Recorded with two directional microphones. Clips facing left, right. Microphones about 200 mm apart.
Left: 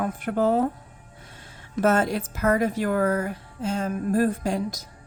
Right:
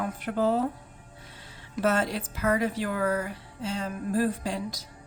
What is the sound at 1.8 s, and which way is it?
Speech, 50° left (ahead or behind).